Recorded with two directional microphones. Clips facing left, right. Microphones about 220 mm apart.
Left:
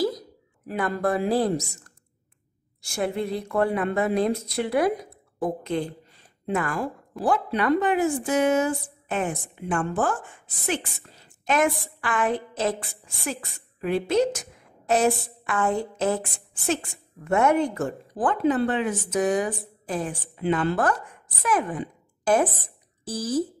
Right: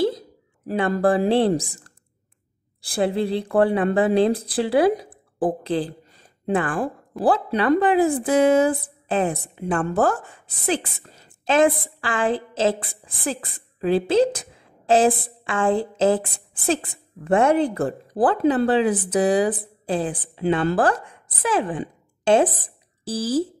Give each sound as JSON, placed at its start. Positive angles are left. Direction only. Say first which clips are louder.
{"t": 0.0, "sound": "speech", "louder": "right 3 dB", "side_deg": -30}
{"t": 10.8, "sound": "a woman's voice", "louder": "right 2 dB", "side_deg": -55}
{"t": 11.4, "sound": "a woman's voice", "louder": "right 5 dB", "side_deg": -30}
{"t": 15.0, "sound": "a woman's voice", "louder": "right 3 dB", "side_deg": -50}
{"t": 15.4, "sound": "a woman's voice", "louder": "right 4 dB", "side_deg": -30}